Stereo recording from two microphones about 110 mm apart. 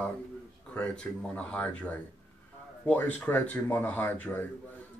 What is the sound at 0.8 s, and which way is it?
Speech, 10° left (ahead or behind).